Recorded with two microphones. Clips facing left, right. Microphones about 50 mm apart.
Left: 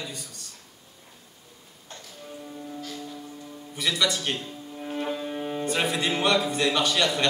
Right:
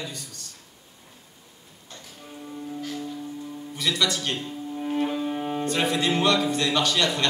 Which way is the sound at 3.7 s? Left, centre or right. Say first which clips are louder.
Even; centre.